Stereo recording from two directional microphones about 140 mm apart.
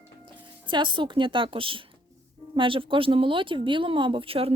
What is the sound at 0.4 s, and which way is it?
Speech, 35° right (ahead or behind).